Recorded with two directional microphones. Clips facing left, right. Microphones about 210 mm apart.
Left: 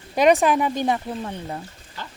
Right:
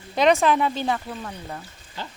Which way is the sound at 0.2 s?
10° left (ahead or behind).